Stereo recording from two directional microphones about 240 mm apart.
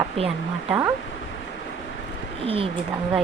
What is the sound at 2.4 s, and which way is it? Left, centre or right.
Speech, right.